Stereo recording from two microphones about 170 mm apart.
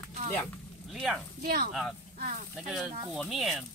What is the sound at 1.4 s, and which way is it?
Speech, 60° right (ahead or behind).